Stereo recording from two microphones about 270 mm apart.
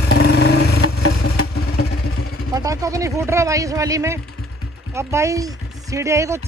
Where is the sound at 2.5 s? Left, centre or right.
Centre.